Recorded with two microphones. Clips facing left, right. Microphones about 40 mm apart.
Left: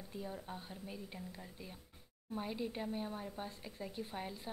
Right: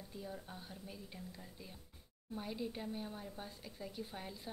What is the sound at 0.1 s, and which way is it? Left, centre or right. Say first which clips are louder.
A woman's voice: left 4 dB; centre.